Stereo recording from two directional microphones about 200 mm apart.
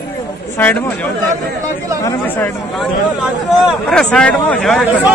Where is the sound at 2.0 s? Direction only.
10° left (ahead or behind).